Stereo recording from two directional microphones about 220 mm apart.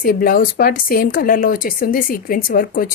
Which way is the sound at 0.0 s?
40° left (ahead or behind).